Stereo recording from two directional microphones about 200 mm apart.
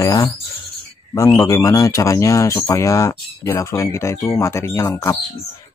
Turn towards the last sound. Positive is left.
turn(degrees=15)  # may be behind; listen again after turning